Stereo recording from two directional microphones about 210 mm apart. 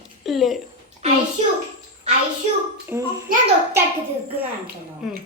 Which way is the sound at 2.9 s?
10° right (ahead or behind).